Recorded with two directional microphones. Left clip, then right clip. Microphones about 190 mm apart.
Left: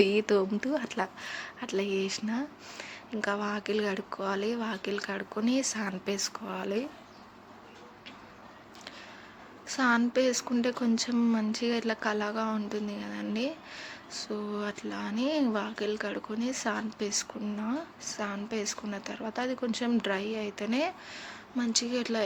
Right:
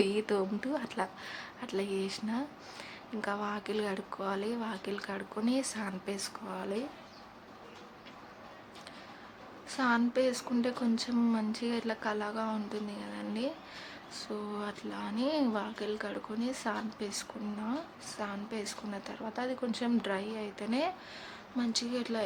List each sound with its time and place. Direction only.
0.0 s speech: 20° left (ahead or behind)
9.6 s speech: 20° left (ahead or behind)